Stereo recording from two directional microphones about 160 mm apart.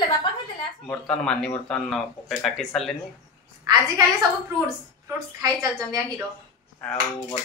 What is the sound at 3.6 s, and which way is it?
Speech, 25° right (ahead or behind).